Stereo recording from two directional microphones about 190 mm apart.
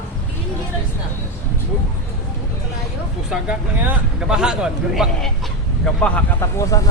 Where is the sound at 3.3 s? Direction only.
5° right (ahead or behind).